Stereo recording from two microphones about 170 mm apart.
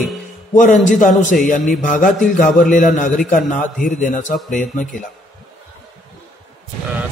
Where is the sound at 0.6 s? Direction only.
50° left (ahead or behind).